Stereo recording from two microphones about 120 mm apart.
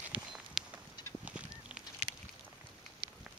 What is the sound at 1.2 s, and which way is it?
Goose, 10° right (ahead or behind).